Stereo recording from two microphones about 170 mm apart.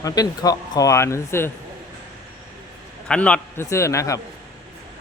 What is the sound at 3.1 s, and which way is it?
Speech, 5° left (ahead or behind).